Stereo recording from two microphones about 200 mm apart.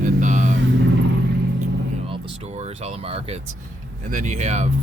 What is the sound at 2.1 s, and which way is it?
Music, 35° right (ahead or behind).